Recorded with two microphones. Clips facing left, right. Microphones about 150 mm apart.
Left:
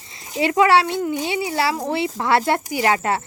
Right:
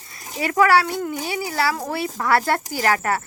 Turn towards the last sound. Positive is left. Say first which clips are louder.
# left 2 dB
turn(degrees=20)  # may be behind; listen again after turning